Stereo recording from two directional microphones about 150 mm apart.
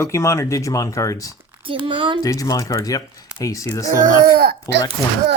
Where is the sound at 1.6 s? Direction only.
35° right (ahead or behind).